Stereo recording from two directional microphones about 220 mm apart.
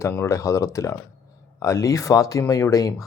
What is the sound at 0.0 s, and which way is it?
Speech, 10° left (ahead or behind).